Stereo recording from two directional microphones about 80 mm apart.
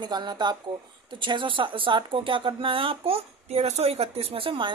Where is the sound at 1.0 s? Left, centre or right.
Right.